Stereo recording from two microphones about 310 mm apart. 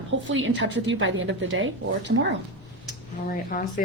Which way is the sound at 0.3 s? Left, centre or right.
Right.